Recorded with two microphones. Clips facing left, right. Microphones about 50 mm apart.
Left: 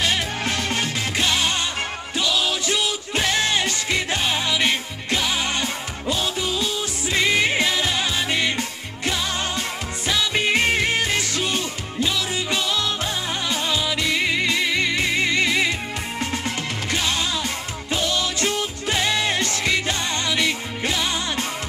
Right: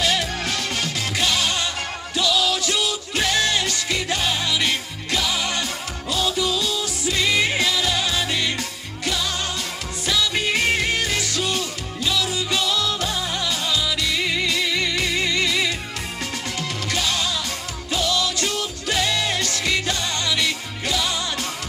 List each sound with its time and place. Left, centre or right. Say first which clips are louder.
0.0 s music: even; left
16.9 s music: left 1 dB; left